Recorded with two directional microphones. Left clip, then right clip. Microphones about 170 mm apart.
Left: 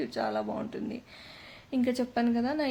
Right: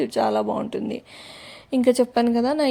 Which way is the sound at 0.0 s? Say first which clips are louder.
Right 10 dB; 45° right (ahead or behind).